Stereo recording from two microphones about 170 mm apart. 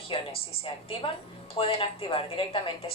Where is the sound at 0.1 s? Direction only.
30° left (ahead or behind).